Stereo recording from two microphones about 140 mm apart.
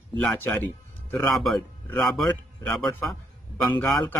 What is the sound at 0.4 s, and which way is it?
Speech, 15° left (ahead or behind).